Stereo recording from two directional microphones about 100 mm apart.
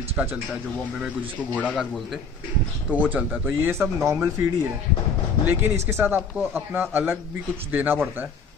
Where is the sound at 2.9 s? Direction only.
15° right (ahead or behind).